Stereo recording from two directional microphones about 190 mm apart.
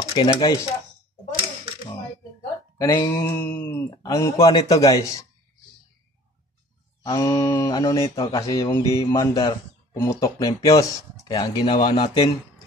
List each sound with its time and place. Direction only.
0.1 s speech: 20° left (ahead or behind)
2.8 s speech: 20° left (ahead or behind)
7.0 s speech: 25° left (ahead or behind)